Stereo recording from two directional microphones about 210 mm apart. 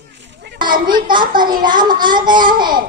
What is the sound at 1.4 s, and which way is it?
Child singing, 20° right (ahead or behind).